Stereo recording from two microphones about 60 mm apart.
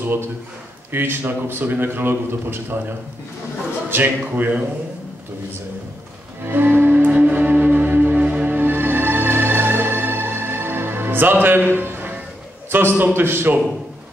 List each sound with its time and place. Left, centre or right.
0.9 s a man's voice: right
4.4 s a man's voice: right
6.4 s music: right
12.7 s a man's voice: right